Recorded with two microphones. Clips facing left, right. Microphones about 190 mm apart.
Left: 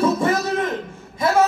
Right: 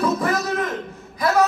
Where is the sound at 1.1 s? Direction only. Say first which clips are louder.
Left 1 dB; 25° left (ahead or behind).